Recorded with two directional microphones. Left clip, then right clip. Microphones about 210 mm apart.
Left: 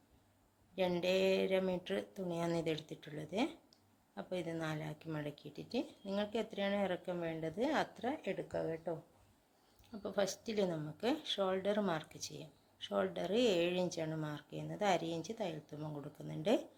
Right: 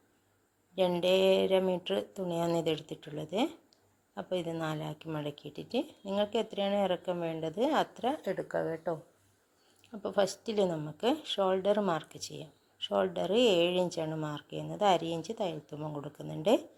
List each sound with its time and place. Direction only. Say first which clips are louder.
0.8 s speech: right 7 dB; 15° right (ahead or behind)
8.3 s speech: right 6 dB; 10° right (ahead or behind)